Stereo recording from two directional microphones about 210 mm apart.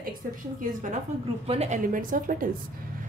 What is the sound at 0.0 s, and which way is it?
Speech, 40° right (ahead or behind).